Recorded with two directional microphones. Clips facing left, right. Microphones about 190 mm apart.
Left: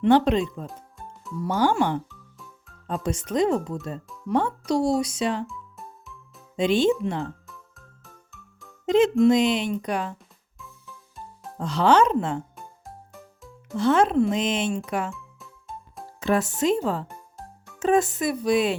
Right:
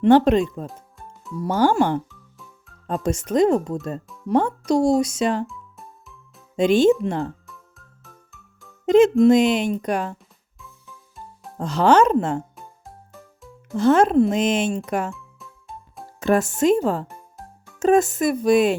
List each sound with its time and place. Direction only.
0.0 s speech: 50° right (ahead or behind)
5.5 s music: centre (ahead or behind)
6.6 s speech: 45° right (ahead or behind)
8.0 s music: centre (ahead or behind)
8.9 s music: 50° right (ahead or behind)
9.2 s speech: 50° right (ahead or behind)
10.6 s music: centre (ahead or behind)
11.6 s speech: 45° right (ahead or behind)
13.7 s speech: 45° right (ahead or behind)
15.1 s music: centre (ahead or behind)
16.2 s speech: 45° right (ahead or behind)